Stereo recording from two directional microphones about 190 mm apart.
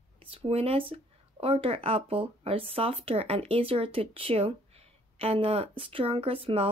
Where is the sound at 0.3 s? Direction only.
30° right (ahead or behind).